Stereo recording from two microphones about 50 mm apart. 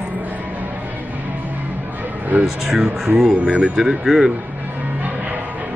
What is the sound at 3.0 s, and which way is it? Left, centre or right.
Speech, centre.